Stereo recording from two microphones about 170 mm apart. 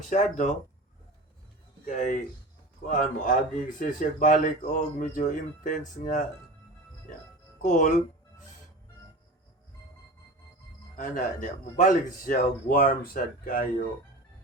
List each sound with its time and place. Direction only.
0.1 s a man's voice: 45° left (ahead or behind)
1.8 s a man's voice: 50° left (ahead or behind)
7.6 s a man's voice: 50° left (ahead or behind)
10.9 s a man's voice: 50° left (ahead or behind)